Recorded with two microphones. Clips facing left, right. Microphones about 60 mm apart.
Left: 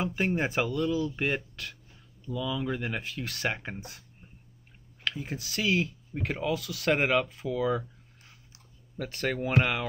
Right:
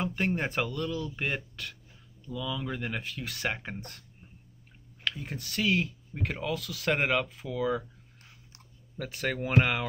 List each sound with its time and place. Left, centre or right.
0.0 s speech: centre
5.0 s speech: centre
8.9 s speech: centre